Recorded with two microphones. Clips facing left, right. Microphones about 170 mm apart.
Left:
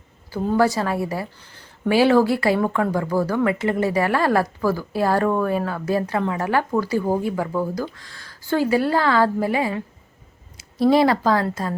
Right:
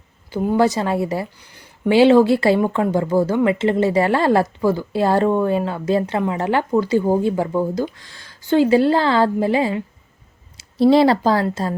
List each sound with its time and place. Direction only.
0.3 s a woman's voice: 15° right (ahead or behind)